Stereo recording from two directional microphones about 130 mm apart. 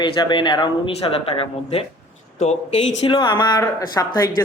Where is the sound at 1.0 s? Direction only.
50° left (ahead or behind).